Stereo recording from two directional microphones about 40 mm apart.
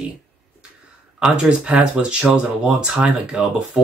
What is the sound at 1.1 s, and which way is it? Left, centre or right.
Speech, right.